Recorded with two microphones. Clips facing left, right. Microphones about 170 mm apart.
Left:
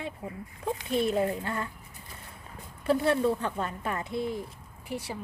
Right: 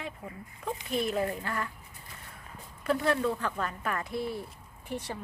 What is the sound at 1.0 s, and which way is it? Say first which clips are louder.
Speech: left 4 dB; 25° left (ahead or behind).